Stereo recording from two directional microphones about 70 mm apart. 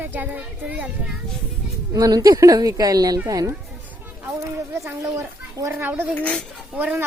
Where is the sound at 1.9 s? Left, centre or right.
Right.